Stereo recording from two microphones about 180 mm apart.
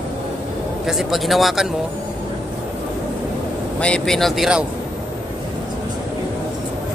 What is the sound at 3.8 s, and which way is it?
Speech, 5° left (ahead or behind).